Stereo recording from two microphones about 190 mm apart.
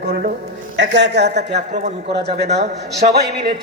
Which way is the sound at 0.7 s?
65° right (ahead or behind).